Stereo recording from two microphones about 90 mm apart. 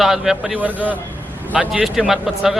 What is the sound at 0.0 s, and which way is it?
Speech, 5° right (ahead or behind).